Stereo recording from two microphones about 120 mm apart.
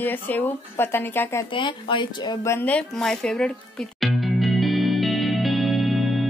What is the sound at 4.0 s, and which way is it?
Music, centre (ahead or behind).